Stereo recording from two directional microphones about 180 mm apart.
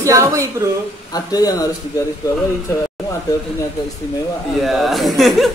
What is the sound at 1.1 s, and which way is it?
Speech, 20° left (ahead or behind).